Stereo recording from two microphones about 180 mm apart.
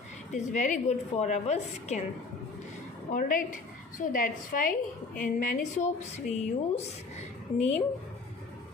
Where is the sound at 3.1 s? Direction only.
50° left (ahead or behind).